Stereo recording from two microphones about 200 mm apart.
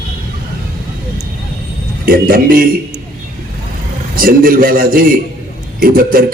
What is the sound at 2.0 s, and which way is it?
Speech, 45° right (ahead or behind).